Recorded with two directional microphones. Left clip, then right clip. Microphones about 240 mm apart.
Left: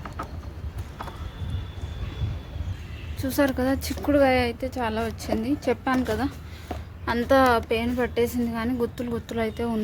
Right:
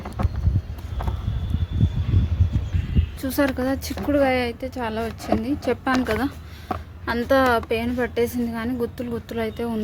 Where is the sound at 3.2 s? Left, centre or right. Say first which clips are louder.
Right 1 dB; centre.